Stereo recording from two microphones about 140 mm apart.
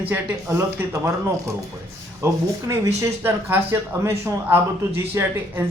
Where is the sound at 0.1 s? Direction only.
15° right (ahead or behind).